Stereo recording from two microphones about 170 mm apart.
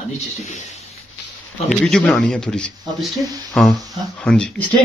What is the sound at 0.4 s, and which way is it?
Speech, 45° left (ahead or behind).